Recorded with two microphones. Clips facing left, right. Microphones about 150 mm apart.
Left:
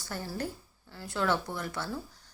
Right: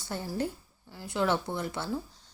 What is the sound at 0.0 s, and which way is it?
A woman's voice, 20° right (ahead or behind).